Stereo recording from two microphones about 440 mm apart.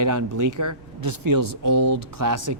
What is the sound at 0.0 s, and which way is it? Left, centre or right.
Speech, right.